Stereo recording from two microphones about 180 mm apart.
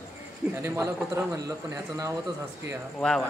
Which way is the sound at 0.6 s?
15° right (ahead or behind).